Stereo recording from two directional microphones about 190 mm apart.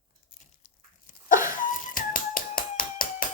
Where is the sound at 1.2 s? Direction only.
45° left (ahead or behind).